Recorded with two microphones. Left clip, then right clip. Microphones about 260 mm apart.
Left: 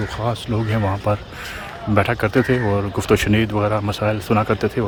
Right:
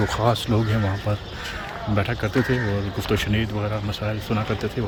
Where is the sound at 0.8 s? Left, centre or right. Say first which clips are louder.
Left 6 dB; centre.